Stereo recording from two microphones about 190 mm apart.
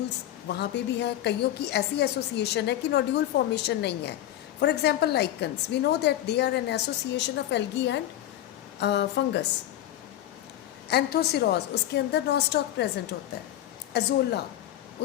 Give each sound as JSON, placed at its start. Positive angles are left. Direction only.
{"t": 0.4, "sound": "a woman's voice", "side_deg": 60}
{"t": 10.8, "sound": "a woman's voice", "side_deg": 60}
{"t": 13.9, "sound": "a woman's voice", "side_deg": 60}